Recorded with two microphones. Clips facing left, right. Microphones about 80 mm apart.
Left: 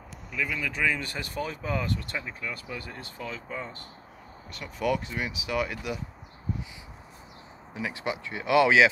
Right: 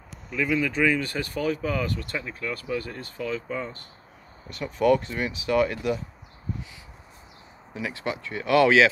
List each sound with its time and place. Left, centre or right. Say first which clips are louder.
0.3 s speech: right 7 dB; centre
4.5 s speech: right 7 dB; centre
7.7 s speech: right 1 dB; left